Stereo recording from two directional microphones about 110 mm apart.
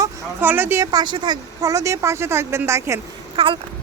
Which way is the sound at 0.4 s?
20° right (ahead or behind).